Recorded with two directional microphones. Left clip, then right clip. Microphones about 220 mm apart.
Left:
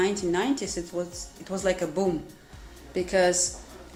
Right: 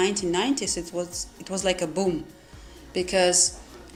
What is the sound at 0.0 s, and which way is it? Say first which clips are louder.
Speech: right 1 dB; 30° right (ahead or behind).